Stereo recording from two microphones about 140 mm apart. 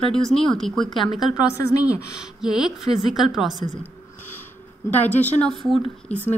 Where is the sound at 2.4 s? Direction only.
5° right (ahead or behind).